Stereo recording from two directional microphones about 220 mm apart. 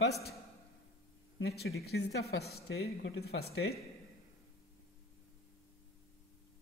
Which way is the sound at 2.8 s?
70° left (ahead or behind).